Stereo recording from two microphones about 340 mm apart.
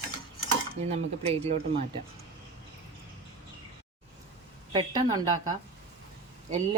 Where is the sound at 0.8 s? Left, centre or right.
Centre.